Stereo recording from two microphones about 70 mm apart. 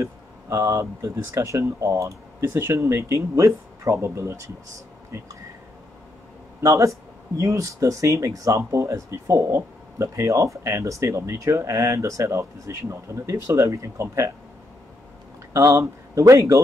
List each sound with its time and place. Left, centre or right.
0.0 s speech: right
6.6 s speech: right
15.5 s speech: right